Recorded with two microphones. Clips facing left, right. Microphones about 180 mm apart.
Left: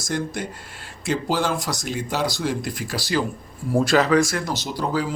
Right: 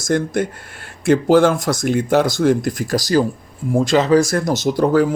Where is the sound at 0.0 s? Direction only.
50° right (ahead or behind).